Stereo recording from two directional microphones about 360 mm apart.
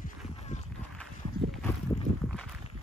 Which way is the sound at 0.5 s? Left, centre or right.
Centre.